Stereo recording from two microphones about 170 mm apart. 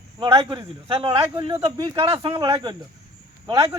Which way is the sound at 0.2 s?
30° right (ahead or behind).